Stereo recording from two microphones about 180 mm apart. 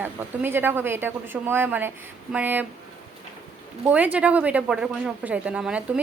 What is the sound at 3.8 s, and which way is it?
A woman's voice, 10° right (ahead or behind).